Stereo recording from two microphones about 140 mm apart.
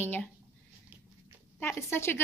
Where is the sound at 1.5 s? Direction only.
15° left (ahead or behind).